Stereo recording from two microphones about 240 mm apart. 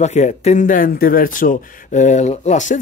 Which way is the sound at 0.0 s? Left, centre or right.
Left.